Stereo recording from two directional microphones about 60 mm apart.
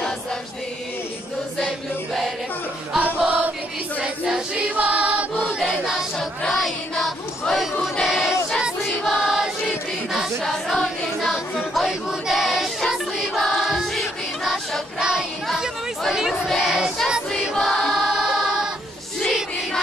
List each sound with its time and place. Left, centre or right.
3.3 s chant: right
4.0 s music: centre
5.6 s choir: centre
6.4 s a sound: centre
8.0 s choir: centre
10.4 s choir: centre
15.0 s child singing: centre
15.4 s chatter: centre
16.1 s speech: centre
16.4 s child singing: centre
17.4 s choir: centre
17.9 s music: centre